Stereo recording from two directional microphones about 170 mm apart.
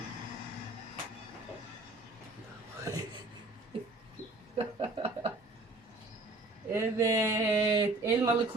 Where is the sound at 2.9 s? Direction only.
20° right (ahead or behind).